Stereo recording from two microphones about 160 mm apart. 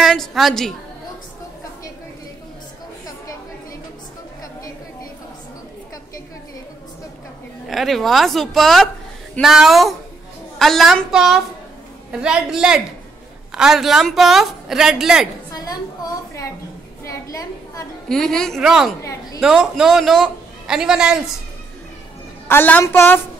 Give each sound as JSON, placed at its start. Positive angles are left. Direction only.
{"t": 0.0, "sound": "a woman's voice", "side_deg": 0}
{"t": 7.6, "sound": "a man's voice", "side_deg": 0}
{"t": 15.5, "sound": "a sound", "side_deg": 25}
{"t": 18.0, "sound": "a man's voice", "side_deg": 5}
{"t": 22.5, "sound": "a woman's voice", "side_deg": 10}